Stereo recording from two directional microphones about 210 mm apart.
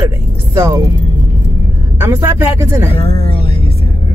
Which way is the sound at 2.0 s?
15° right (ahead or behind).